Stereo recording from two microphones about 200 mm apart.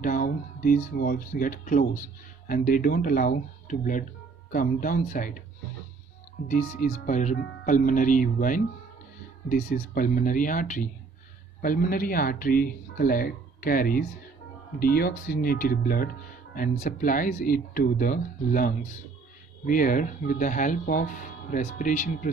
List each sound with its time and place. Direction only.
0.0 s speech: 45° left (ahead or behind)
6.8 s speech: 40° left (ahead or behind)